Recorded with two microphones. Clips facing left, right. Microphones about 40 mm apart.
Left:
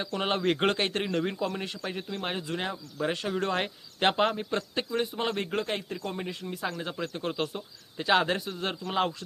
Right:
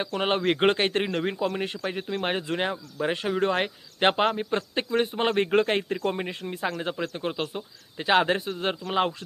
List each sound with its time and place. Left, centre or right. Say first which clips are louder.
0.0 s speech: right 3 dB; right